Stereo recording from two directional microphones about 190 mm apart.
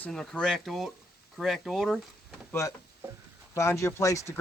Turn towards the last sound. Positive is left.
turn(degrees=15)  # may be behind; listen again after turning